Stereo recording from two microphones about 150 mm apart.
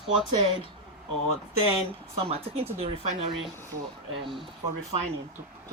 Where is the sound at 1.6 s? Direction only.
40° right (ahead or behind).